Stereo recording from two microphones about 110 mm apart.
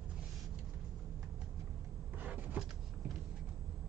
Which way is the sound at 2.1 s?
15° right (ahead or behind).